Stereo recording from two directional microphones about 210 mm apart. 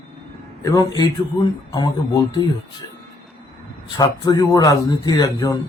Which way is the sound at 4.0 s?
20° left (ahead or behind).